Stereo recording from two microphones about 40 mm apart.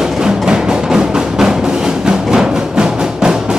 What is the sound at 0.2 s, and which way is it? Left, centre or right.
Music, centre.